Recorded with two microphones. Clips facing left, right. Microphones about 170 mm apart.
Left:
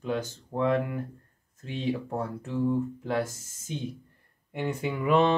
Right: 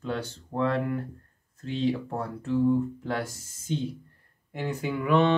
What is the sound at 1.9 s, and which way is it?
Speech, 10° left (ahead or behind).